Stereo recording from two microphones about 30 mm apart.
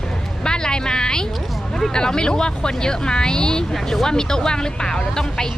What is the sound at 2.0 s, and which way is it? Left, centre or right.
Speech, left.